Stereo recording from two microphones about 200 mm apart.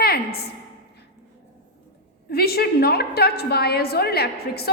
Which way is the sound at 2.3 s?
50° left (ahead or behind).